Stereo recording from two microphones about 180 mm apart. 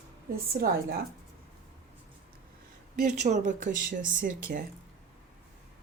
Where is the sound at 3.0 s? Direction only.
40° right (ahead or behind).